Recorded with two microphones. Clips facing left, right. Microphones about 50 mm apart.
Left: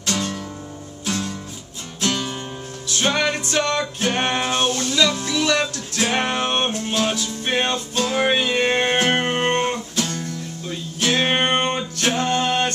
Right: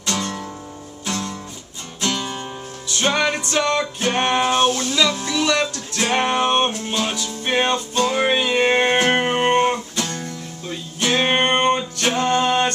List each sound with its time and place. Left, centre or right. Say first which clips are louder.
0.0 s music: even; centre